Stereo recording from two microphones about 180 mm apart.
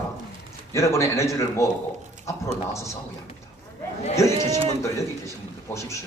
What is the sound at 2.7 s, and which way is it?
Speech, 15° left (ahead or behind).